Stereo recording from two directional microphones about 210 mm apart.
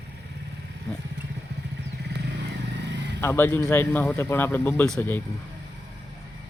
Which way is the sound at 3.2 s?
10° left (ahead or behind).